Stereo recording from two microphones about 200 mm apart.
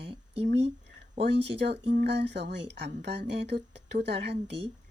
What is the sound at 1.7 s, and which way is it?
Speech, 55° right (ahead or behind).